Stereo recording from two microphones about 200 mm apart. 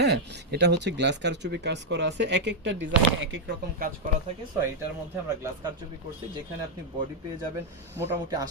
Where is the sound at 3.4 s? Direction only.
45° right (ahead or behind).